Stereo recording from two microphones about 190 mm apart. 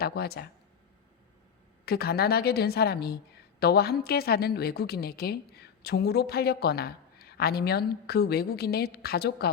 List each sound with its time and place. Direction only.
0.0 s a woman's voice: 55° left (ahead or behind)
1.8 s a woman's voice: 55° left (ahead or behind)